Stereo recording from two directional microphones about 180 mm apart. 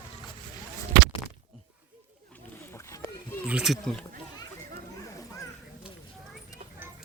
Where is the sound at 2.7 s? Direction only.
15° left (ahead or behind).